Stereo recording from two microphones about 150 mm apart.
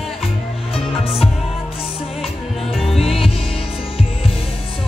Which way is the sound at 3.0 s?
40° left (ahead or behind).